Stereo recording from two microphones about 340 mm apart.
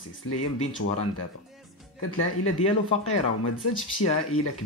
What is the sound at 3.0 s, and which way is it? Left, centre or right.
Speech, left.